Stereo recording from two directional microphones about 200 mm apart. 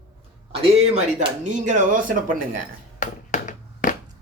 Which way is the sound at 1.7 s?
40° right (ahead or behind).